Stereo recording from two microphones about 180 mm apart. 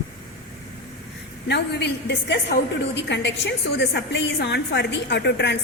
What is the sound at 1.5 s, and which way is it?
A woman's voice, 70° left (ahead or behind).